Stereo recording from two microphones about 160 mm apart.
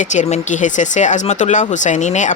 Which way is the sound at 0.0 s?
50° left (ahead or behind).